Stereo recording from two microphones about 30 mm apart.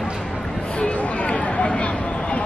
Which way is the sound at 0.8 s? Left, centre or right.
Left.